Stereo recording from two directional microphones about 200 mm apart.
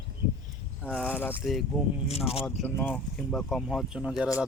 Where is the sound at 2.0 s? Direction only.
30° left (ahead or behind).